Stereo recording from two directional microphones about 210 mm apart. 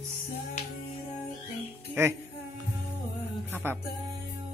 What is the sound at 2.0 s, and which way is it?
Speech, 15° right (ahead or behind).